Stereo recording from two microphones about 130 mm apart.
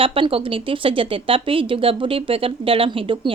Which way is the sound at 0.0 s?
45° right (ahead or behind).